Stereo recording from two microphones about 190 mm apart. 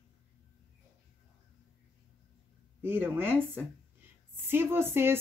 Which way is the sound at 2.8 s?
10° right (ahead or behind).